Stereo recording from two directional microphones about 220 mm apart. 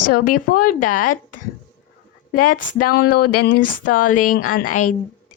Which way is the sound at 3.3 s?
90° left.